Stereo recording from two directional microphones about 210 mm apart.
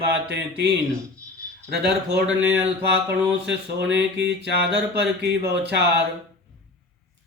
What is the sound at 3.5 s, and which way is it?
Speech, 55° right (ahead or behind).